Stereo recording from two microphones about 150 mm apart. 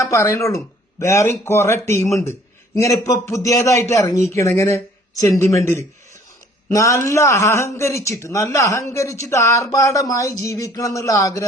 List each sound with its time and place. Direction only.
0.0 s a man's voice: 20° left (ahead or behind)